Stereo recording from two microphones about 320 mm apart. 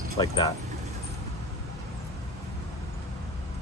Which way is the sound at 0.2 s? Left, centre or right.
Centre.